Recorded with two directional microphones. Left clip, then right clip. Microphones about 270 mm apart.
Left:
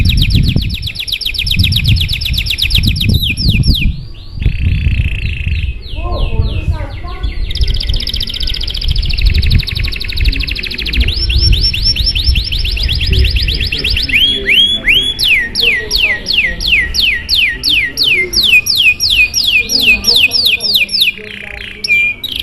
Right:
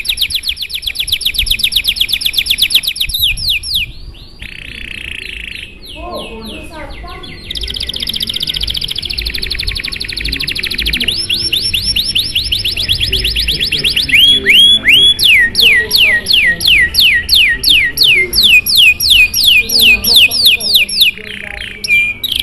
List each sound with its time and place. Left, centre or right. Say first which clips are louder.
0.0 s bird: right 2 dB; centre
7.8 s bird: right 1 dB; centre
11.7 s music: right 1 dB; centre
20.4 s a sound: right 2 dB; centre